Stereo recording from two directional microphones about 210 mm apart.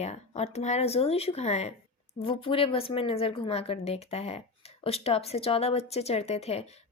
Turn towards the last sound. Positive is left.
turn(degrees=30)  # may be behind; listen again after turning